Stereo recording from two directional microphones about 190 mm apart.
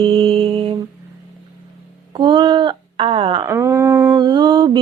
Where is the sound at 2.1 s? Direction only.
25° right (ahead or behind).